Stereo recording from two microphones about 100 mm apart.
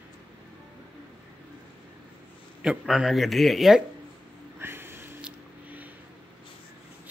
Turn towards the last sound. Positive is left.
turn(degrees=-15)  # may be behind; listen again after turning